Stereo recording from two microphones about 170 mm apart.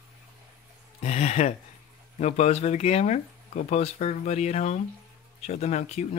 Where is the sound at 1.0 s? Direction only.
40° left (ahead or behind).